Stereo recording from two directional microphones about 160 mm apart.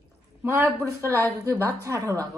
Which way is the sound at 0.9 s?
20° right (ahead or behind).